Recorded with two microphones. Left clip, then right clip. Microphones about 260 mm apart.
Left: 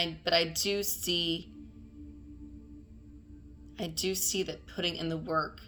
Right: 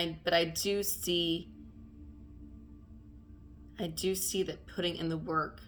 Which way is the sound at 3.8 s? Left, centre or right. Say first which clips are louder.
Left 1 dB; centre.